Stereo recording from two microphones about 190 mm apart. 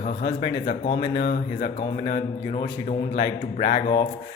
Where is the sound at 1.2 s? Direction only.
55° left (ahead or behind).